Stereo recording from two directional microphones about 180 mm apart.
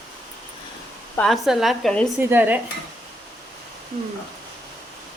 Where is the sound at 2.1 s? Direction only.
10° right (ahead or behind).